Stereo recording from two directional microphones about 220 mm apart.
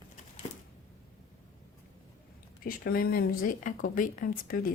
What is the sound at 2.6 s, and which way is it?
Speech, 40° left (ahead or behind).